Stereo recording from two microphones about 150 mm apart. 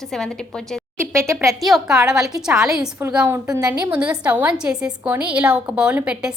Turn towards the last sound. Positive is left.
turn(degrees=-10)  # may be behind; listen again after turning